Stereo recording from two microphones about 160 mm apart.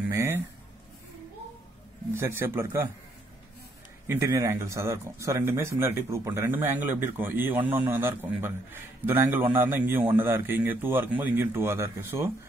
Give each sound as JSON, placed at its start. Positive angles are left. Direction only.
{"t": 0.1, "sound": "a sound", "side_deg": -15}
{"t": 2.1, "sound": "speech", "side_deg": -15}
{"t": 4.1, "sound": "speech", "side_deg": -15}